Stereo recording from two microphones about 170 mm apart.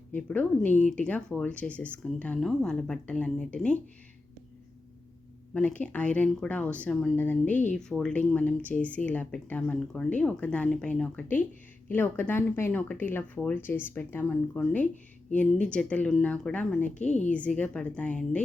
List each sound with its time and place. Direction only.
0.1 s speech: 10° left (ahead or behind)
5.5 s speech: 10° left (ahead or behind)
17.0 s a woman's voice: 45° left (ahead or behind)
17.3 s speech: 10° left (ahead or behind)